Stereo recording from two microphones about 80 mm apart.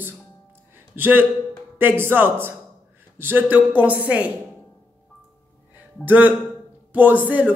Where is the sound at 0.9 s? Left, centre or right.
Right.